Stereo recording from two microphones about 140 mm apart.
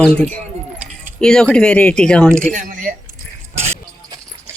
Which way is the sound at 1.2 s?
5° left (ahead or behind).